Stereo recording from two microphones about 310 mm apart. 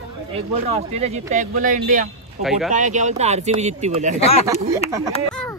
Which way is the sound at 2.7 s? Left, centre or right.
Right.